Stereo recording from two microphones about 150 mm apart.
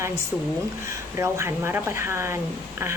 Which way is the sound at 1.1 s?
20° right (ahead or behind).